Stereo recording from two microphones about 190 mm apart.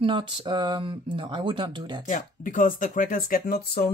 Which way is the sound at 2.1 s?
45° left (ahead or behind).